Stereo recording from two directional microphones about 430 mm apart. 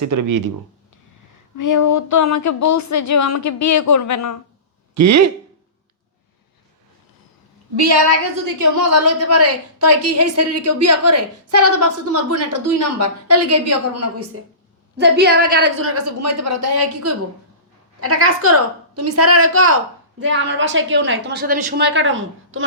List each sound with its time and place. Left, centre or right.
0.0 s speech: right
1.5 s speech: left
4.9 s a woman's voice: right
7.8 s a woman's voice: right
14.9 s a woman's voice: right